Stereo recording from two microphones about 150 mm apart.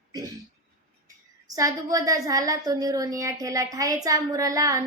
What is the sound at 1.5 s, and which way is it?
A woman's voice, 25° right (ahead or behind).